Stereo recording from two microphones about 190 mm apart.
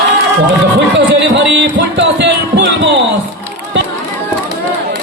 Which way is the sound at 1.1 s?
70° right (ahead or behind).